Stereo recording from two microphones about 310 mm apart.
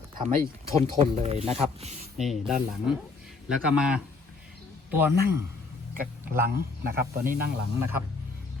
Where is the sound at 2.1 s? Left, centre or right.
Centre.